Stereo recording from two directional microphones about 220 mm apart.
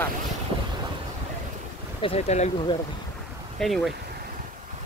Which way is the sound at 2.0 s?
25° left (ahead or behind).